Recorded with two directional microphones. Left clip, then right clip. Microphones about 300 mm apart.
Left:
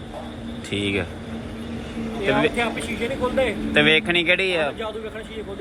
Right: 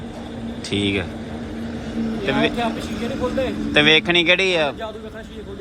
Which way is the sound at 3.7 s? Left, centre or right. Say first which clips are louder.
Right 3 dB; centre.